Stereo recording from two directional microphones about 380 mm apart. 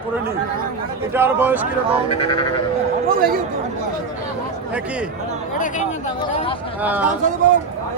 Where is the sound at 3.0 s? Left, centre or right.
Right.